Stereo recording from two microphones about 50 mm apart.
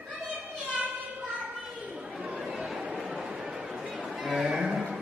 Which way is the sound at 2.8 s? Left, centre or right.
Centre.